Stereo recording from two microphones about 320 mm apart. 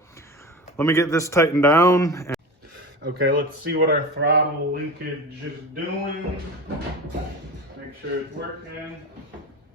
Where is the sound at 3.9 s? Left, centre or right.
Right.